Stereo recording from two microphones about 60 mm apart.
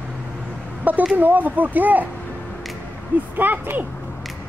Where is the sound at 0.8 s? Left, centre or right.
Right.